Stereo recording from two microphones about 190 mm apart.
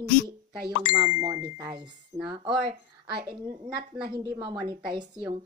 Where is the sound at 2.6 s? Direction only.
55° right (ahead or behind).